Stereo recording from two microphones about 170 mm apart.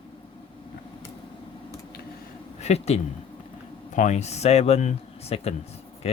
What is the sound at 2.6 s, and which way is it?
Speech, 40° left (ahead or behind).